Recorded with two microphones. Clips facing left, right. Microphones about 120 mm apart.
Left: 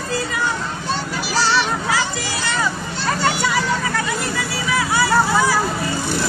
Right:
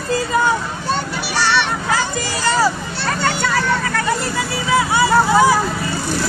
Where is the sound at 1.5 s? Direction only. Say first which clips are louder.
Right 3 dB; 65° right (ahead or behind).